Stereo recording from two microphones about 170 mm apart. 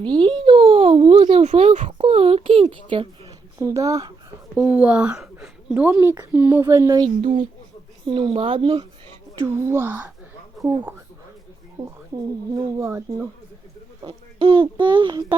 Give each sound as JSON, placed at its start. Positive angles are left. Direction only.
{"t": 0.0, "sound": "a sound", "side_deg": -30}
{"t": 3.6, "sound": "speech", "side_deg": -20}
{"t": 4.8, "sound": "a woman's voice", "side_deg": -5}
{"t": 7.2, "sound": "speech", "side_deg": -35}
{"t": 9.6, "sound": "a woman's voice", "side_deg": -15}
{"t": 12.1, "sound": "a woman's voice", "side_deg": -25}
{"t": 14.0, "sound": "a child's voice", "side_deg": -30}